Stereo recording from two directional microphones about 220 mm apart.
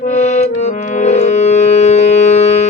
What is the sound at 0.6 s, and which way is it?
Music, 30° left (ahead or behind).